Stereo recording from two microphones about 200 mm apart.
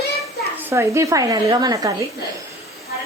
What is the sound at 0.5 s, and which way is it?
Speech, 15° right (ahead or behind).